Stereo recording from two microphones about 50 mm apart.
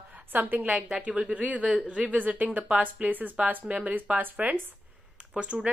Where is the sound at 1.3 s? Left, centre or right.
Right.